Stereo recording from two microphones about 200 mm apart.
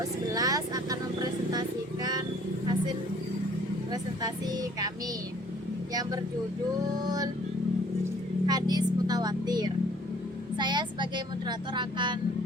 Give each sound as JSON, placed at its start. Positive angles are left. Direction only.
{"t": 0.0, "sound": "vehicle", "side_deg": -20}
{"t": 3.9, "sound": "speech", "side_deg": -20}
{"t": 5.9, "sound": "speech", "side_deg": -20}
{"t": 8.4, "sound": "speech", "side_deg": -20}